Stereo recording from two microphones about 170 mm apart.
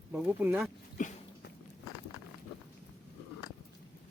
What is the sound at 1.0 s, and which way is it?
Dog, 50° left (ahead or behind).